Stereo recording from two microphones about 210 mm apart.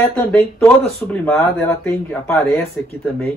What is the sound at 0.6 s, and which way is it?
Speech, 5° left (ahead or behind).